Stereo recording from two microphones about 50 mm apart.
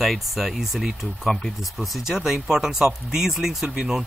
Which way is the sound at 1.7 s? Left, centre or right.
Centre.